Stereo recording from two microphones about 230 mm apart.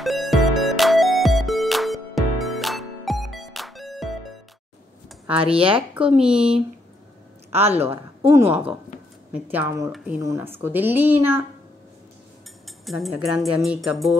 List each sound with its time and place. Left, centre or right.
0.0 s music: centre
5.6 s speech: right
6.1 s speech: centre
7.6 s speech: centre
12.6 s speech: centre